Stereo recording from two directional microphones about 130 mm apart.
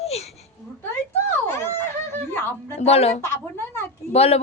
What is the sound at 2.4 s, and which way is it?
Speech, 15° left (ahead or behind).